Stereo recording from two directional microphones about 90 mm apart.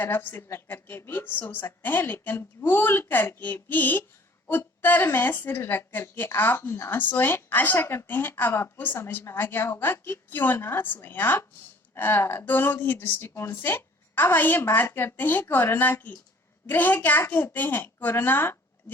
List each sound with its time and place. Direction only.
0.0 s a woman's voice: 20° left (ahead or behind)